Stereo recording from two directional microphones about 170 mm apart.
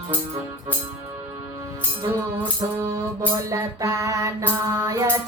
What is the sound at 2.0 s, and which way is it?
Music, 20° right (ahead or behind).